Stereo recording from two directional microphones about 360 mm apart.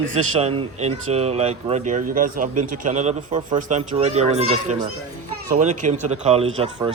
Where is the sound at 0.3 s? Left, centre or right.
Centre.